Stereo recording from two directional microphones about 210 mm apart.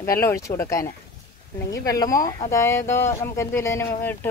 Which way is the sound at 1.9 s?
15° left (ahead or behind).